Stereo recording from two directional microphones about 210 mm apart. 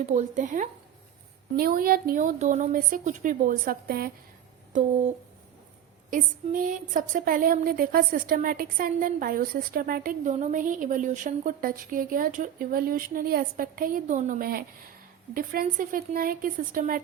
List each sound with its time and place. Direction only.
0.0 s a woman's voice: 35° right (ahead or behind)
6.1 s speech: 40° right (ahead or behind)